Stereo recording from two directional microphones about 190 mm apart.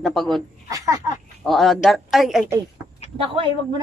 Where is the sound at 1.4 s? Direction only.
Centre (ahead or behind).